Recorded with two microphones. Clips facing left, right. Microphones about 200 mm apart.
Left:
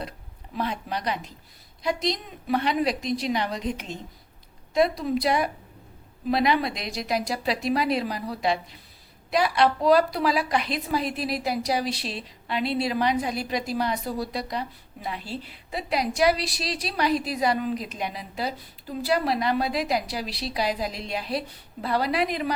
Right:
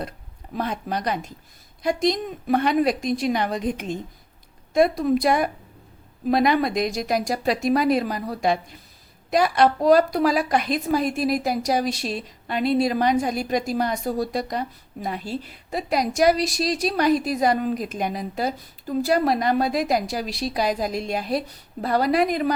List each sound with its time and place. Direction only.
0.5 s a woman's voice: 45° right (ahead or behind)